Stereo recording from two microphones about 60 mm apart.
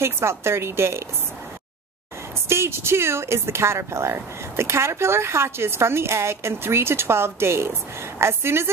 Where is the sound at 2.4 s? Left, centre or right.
Right.